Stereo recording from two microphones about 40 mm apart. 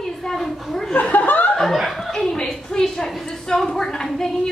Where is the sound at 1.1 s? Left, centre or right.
Left.